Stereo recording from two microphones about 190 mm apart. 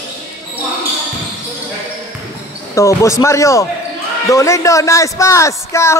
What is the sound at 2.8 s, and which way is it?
A man's voice, 15° left (ahead or behind).